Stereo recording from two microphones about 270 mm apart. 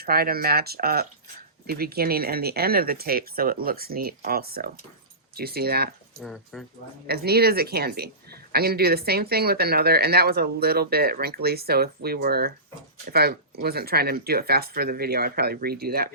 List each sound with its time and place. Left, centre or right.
0.0 s speech: right
6.1 s speech: centre
7.1 s speech: right